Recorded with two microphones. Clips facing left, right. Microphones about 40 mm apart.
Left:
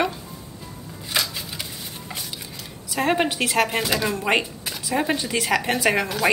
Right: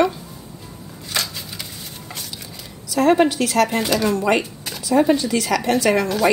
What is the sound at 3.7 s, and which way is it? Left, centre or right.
Speech, centre.